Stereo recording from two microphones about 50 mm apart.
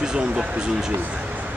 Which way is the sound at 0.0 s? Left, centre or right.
Centre.